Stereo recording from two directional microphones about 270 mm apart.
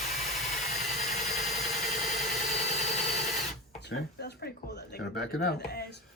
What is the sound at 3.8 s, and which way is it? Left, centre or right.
Speech, left.